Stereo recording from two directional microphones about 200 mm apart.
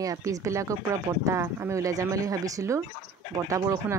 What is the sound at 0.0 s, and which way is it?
Speech, 15° right (ahead or behind).